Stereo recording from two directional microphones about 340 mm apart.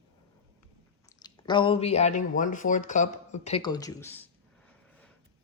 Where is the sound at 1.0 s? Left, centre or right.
Centre.